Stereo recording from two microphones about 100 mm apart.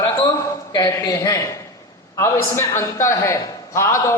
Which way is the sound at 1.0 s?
35° left (ahead or behind).